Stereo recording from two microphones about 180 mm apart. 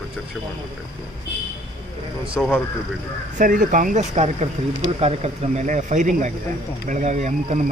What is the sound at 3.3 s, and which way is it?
Speech, 45° right (ahead or behind).